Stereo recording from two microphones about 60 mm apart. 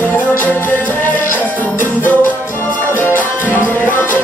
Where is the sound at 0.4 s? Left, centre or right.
Left.